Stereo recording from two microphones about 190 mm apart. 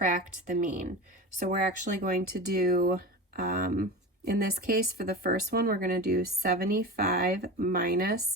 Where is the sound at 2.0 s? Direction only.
55° right (ahead or behind).